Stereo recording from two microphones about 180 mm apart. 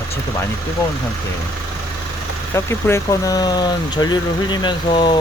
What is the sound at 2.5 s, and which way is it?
Speech, 15° left (ahead or behind).